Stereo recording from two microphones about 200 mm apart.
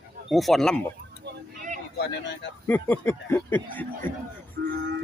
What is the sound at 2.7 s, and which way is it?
Speech, 10° left (ahead or behind).